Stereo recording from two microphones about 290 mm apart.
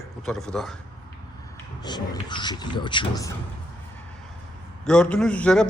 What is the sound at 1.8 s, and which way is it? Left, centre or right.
Speech, centre.